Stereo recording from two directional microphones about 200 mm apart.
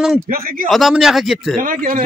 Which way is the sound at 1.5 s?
45° right (ahead or behind).